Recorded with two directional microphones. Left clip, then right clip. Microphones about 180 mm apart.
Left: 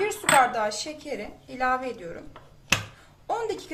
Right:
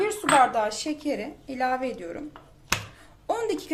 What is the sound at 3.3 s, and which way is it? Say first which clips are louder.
Speech: right 2 dB; 45° right (ahead or behind).